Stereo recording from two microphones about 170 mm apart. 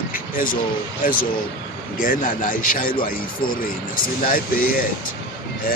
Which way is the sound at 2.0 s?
55° left (ahead or behind).